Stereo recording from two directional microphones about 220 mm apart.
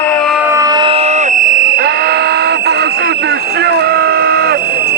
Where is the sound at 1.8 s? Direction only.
45° right (ahead or behind).